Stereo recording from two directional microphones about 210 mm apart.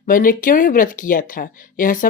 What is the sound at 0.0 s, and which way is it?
Speech, 40° left (ahead or behind).